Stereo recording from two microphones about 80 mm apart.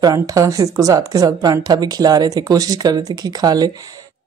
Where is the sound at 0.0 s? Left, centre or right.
Right.